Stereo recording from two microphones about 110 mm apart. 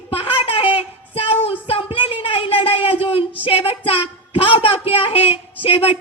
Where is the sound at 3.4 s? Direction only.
60° left (ahead or behind).